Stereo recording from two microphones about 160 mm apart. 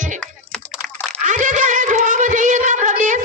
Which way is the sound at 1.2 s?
50° right (ahead or behind).